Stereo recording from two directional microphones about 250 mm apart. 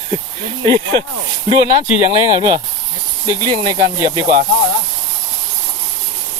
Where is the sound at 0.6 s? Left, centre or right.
Right.